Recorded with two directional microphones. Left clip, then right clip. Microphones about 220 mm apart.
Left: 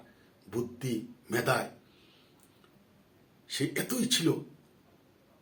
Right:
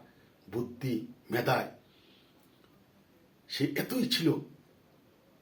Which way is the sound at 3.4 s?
5° left (ahead or behind).